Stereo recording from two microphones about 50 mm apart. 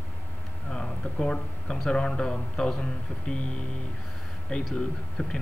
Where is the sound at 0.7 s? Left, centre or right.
Centre.